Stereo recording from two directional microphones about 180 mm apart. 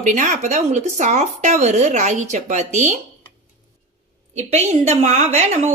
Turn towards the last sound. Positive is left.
turn(degrees=-40)  # may be behind; listen again after turning